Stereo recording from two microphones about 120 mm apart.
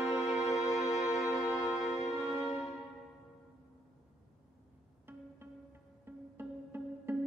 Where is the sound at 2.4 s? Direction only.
Centre (ahead or behind).